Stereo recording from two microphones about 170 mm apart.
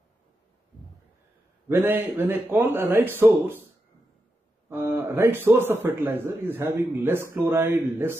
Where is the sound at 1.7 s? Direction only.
10° right (ahead or behind).